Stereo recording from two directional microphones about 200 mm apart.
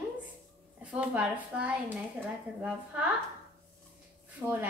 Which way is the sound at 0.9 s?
5° right (ahead or behind).